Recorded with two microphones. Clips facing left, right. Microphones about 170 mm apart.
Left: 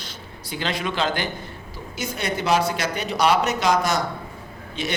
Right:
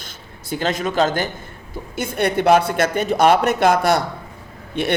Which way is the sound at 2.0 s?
55° right (ahead or behind).